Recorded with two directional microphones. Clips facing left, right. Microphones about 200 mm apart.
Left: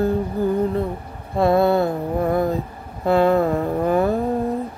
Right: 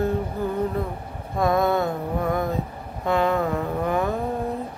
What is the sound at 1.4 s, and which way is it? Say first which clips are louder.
Mantra: left 5 dB; 30° left (ahead or behind).